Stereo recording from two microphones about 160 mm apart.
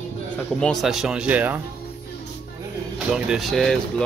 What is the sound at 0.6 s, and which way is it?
Speech, centre (ahead or behind).